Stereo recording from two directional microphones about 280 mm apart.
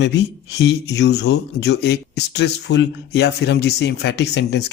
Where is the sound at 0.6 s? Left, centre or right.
Left.